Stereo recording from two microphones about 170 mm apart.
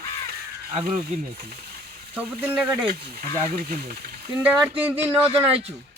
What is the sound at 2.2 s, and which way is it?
Speech, 10° right (ahead or behind).